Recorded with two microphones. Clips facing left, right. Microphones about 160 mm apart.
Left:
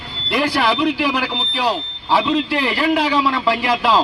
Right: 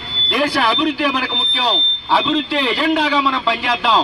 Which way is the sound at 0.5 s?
10° left (ahead or behind).